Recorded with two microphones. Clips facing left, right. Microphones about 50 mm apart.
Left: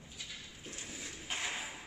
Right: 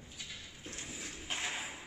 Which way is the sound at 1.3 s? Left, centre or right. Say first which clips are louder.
Even; centre.